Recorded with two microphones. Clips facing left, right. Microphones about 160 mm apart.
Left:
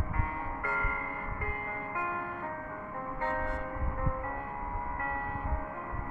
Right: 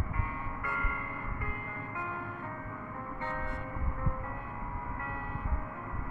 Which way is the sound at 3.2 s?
40° left (ahead or behind).